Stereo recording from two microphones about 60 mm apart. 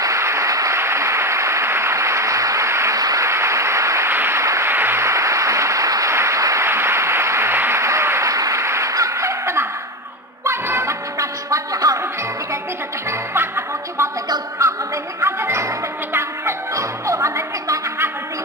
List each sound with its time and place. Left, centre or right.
0.0 s applause: right
0.7 s applause: right
3.0 s a sound: right
3.3 s applause: right
4.1 s applause: right
4.4 s a sound: right
4.6 s applause: right
6.1 s applause: right
6.7 s applause: right
8.3 s applause: right
10.4 s music: right
11.1 s music: right
13.3 s music: right
15.1 s music: right